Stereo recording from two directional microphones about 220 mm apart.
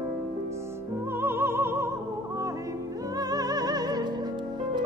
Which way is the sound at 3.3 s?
15° right (ahead or behind).